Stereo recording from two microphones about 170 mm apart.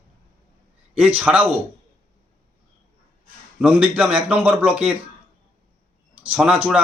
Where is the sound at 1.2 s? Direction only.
5° right (ahead or behind).